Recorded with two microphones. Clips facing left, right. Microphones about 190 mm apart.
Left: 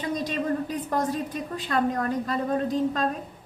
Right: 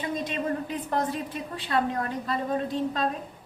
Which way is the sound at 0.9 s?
45° left (ahead or behind).